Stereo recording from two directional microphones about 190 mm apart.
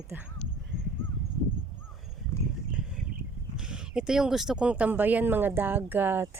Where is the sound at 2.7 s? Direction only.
5° right (ahead or behind).